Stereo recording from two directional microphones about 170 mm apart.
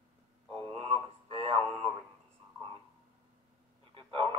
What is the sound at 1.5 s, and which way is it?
Radio, 15° left (ahead or behind).